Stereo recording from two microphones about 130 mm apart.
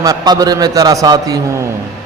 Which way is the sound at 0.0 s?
25° right (ahead or behind).